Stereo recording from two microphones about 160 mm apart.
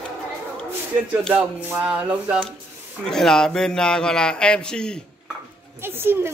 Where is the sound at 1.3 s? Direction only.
10° right (ahead or behind).